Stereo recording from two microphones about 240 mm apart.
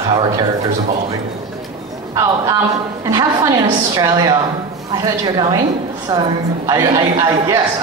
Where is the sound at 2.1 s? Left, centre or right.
Centre.